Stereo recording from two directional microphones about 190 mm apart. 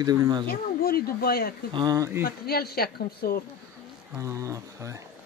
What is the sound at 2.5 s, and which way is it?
Speech, 55° left (ahead or behind).